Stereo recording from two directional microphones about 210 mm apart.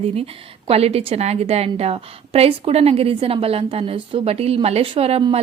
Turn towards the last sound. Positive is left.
turn(degrees=-25)  # may be behind; listen again after turning